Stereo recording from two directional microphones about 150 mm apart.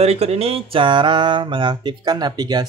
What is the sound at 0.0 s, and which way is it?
Mantra, 45° right (ahead or behind).